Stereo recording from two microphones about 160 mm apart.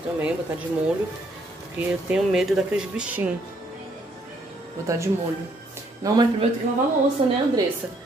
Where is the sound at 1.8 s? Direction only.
5° right (ahead or behind).